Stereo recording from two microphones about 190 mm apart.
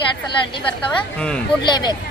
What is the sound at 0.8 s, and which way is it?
Speech, 5° left (ahead or behind).